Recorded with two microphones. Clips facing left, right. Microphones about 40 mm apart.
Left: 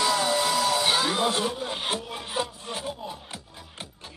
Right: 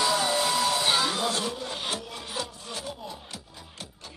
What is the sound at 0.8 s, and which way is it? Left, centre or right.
Music, centre.